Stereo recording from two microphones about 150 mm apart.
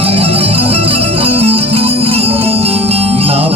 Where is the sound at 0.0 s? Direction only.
40° right (ahead or behind).